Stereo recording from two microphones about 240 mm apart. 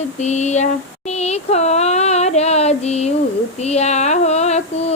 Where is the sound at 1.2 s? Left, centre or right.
Left.